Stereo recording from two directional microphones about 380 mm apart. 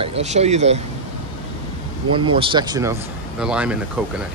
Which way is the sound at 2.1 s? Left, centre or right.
Centre.